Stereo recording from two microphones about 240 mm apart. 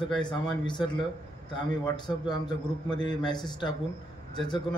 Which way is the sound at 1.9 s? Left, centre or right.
Centre.